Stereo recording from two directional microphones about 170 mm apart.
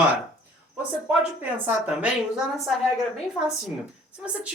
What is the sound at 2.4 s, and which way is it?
Speech, centre (ahead or behind).